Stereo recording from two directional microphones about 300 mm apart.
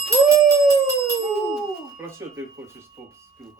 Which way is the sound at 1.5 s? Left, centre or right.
Centre.